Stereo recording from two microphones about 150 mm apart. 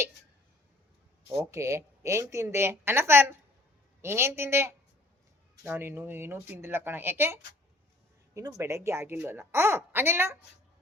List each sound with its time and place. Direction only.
1.5 s a woman's voice: 20° right (ahead or behind)